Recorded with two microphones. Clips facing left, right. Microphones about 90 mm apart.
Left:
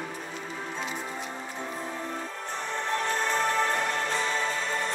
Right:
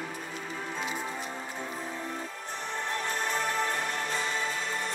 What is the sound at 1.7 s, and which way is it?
Music, 40° left (ahead or behind).